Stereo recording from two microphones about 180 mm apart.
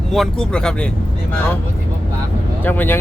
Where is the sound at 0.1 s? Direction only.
5° left (ahead or behind).